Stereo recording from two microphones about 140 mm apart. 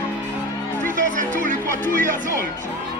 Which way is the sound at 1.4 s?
70° right (ahead or behind).